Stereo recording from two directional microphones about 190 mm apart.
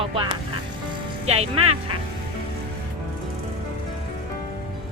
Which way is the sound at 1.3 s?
30° right (ahead or behind).